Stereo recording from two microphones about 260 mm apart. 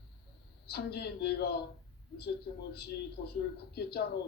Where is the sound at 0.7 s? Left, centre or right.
Left.